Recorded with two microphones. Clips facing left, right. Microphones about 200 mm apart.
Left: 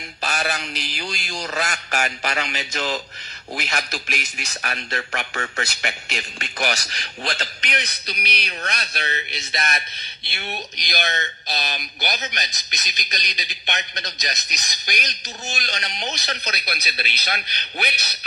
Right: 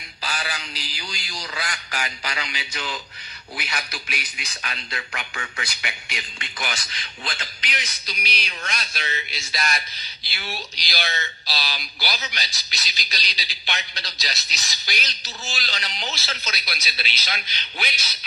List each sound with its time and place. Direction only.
0.2 s a man's voice: 50° left (ahead or behind)
9.3 s speech: 20° left (ahead or behind)
16.4 s speech: 60° left (ahead or behind)